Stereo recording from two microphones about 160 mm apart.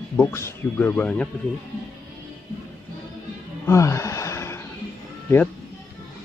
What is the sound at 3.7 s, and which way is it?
Speech, 20° left (ahead or behind).